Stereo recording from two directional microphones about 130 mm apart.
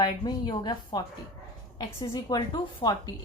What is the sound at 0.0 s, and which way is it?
A woman's voice, 35° left (ahead or behind).